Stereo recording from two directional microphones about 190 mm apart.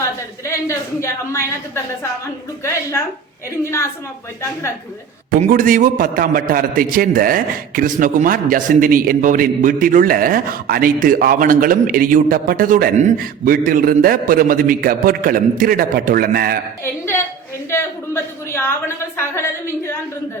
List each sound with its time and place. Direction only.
0.0 s a woman's voice: 15° left (ahead or behind)
3.6 s a woman's voice: 15° left (ahead or behind)
5.3 s a man's voice: 45° right (ahead or behind)
16.8 s a woman's voice: 15° left (ahead or behind)
17.7 s a sound: 15° left (ahead or behind)